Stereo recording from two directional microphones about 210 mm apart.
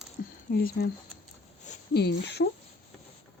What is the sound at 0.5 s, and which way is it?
Speech, 45° left (ahead or behind).